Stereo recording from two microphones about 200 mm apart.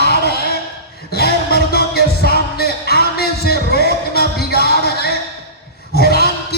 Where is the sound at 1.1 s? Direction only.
50° left (ahead or behind).